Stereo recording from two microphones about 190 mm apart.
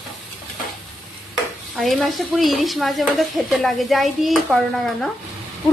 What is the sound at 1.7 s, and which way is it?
A woman's voice, centre (ahead or behind).